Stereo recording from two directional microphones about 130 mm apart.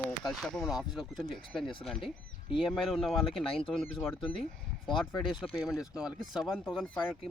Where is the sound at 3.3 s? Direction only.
45° left (ahead or behind).